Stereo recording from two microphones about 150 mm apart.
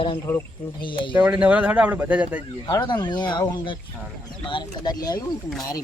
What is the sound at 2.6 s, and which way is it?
Speech, 30° left (ahead or behind).